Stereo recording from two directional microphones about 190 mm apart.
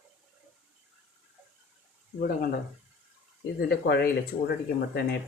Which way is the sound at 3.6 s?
60° left (ahead or behind).